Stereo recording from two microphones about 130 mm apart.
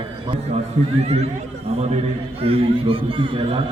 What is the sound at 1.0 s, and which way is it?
A man's voice, 55° right (ahead or behind).